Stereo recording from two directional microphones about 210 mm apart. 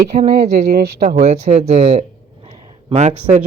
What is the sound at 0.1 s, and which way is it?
Speech, 35° right (ahead or behind).